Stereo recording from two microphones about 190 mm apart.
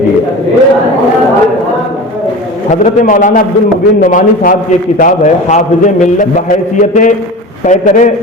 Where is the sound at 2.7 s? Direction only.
45° left (ahead or behind).